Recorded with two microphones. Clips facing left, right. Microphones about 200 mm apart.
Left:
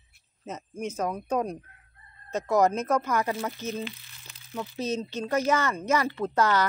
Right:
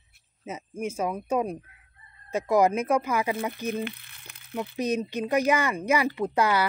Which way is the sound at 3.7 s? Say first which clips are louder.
Right 3 dB; 60° right (ahead or behind).